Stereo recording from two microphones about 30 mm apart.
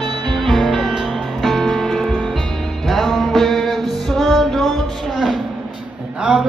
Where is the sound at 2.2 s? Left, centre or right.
Centre.